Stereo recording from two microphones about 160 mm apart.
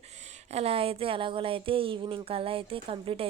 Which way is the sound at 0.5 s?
40° right (ahead or behind).